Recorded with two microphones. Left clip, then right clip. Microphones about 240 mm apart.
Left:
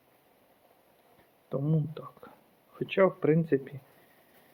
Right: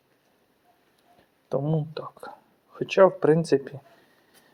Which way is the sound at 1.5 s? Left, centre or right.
Centre.